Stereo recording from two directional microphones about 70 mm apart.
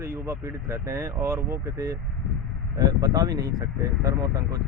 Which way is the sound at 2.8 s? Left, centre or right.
Right.